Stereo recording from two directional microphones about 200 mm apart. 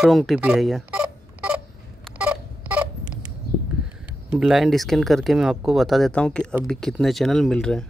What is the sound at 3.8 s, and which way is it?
Speech, 5° right (ahead or behind).